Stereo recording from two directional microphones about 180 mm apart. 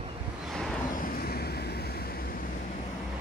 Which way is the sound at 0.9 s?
55° left (ahead or behind).